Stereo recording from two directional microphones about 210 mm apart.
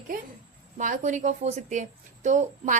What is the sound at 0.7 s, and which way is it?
Speech, 35° right (ahead or behind).